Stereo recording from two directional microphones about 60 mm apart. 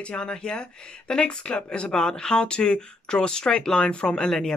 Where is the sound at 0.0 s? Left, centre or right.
Centre.